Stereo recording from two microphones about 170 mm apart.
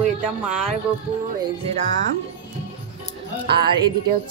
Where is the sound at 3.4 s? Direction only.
70° right (ahead or behind).